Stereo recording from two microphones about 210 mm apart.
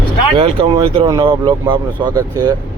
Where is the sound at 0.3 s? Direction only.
25° right (ahead or behind).